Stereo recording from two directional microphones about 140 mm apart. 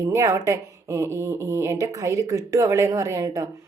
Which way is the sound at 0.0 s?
25° right (ahead or behind).